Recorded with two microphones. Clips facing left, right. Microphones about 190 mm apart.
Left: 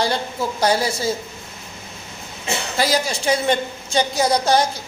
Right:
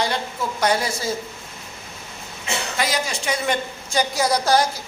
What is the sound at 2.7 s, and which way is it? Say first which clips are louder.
Speech: left 5 dB; 35° left (ahead or behind).